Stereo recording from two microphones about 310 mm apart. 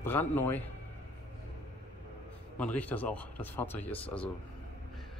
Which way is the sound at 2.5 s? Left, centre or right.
Centre.